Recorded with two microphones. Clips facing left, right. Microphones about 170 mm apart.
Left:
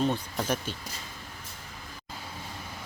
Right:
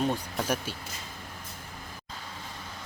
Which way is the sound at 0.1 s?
10° right (ahead or behind).